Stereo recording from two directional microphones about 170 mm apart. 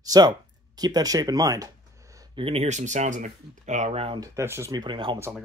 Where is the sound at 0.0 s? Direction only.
20° right (ahead or behind).